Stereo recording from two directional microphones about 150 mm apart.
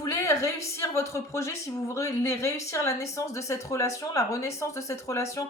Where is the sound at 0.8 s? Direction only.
20° left (ahead or behind).